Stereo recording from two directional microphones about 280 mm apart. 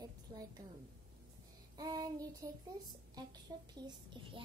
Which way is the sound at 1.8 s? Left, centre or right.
Centre.